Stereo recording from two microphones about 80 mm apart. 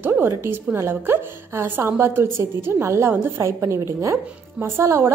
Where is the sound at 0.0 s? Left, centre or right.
Right.